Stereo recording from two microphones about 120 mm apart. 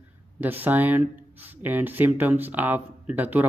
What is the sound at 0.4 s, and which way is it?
Speech, 15° right (ahead or behind).